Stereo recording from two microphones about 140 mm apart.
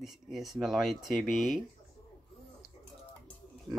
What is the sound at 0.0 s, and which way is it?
Speech, centre (ahead or behind).